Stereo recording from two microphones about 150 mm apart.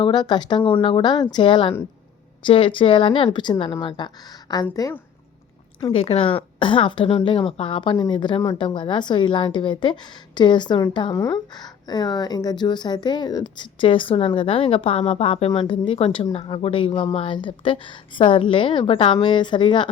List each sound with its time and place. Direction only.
0.0 s a woman's voice: 30° left (ahead or behind)
5.8 s a woman's voice: 40° left (ahead or behind)